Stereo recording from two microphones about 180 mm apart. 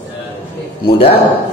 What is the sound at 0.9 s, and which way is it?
Speech, 30° left (ahead or behind).